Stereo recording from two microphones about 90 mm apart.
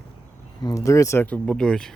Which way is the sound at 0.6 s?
35° left (ahead or behind).